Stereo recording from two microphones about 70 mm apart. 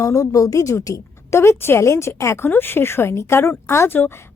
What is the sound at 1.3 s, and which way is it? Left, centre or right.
Speech, left.